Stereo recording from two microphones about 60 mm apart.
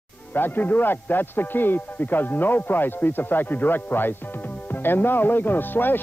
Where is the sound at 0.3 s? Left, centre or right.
Left.